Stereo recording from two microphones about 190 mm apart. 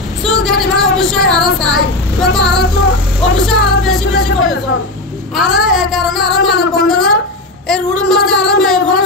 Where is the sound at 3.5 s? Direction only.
Centre (ahead or behind).